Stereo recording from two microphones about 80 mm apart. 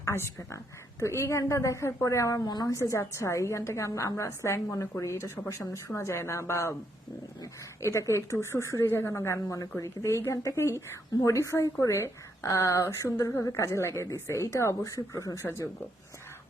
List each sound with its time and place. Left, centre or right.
0.0 s a woman's voice: left
2.5 s a woman's voice: left
2.7 s a woman's voice: left
7.8 s a woman's voice: left